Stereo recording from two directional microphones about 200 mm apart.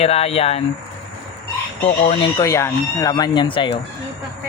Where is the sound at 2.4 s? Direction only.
15° left (ahead or behind).